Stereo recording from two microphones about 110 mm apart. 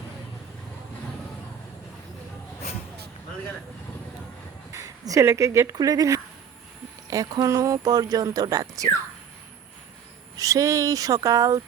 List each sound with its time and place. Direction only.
4.7 s speech: 30° right (ahead or behind)
10.3 s speech: 30° right (ahead or behind)